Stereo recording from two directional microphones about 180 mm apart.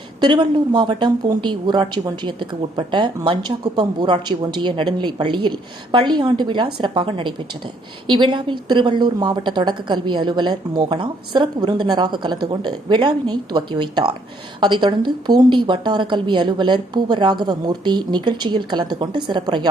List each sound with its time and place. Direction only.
0.2 s a woman's voice: 25° right (ahead or behind)